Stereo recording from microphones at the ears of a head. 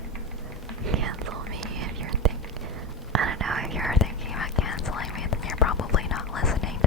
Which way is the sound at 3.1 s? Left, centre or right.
Right.